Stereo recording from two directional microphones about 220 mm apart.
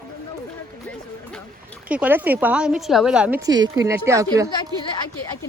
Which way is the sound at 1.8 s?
5° right (ahead or behind).